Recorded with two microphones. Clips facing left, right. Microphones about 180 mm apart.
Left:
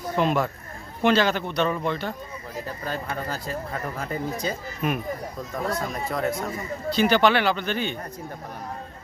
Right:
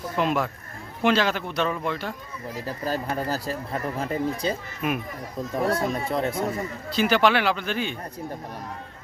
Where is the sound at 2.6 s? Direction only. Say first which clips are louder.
Right 4 dB; 35° right (ahead or behind).